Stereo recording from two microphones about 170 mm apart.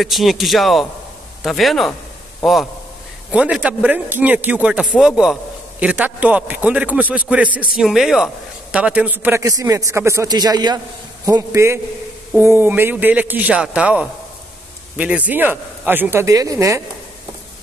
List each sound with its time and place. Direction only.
0.0 s a man's voice: centre (ahead or behind); by 16.8 s 15° right (ahead or behind)